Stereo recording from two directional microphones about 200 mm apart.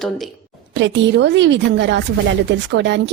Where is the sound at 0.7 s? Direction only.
65° right (ahead or behind).